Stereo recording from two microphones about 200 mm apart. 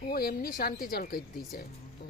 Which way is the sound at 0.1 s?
45° left (ahead or behind).